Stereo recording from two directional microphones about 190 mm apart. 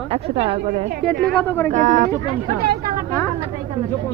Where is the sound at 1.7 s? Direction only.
40° right (ahead or behind).